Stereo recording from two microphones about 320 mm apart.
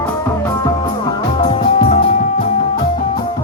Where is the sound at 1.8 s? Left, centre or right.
Left.